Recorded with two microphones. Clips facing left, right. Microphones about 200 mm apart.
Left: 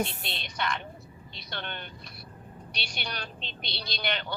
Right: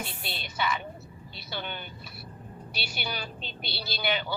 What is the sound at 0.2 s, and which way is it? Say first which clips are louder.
Speech: right 2 dB; 5° right (ahead or behind).